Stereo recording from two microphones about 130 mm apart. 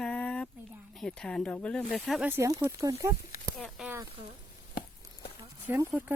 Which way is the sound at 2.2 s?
15° right (ahead or behind).